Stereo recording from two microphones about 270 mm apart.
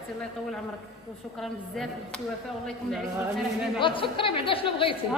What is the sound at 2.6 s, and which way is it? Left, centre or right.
Speech, centre.